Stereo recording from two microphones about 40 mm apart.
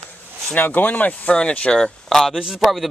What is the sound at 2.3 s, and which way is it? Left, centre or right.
Speech, centre.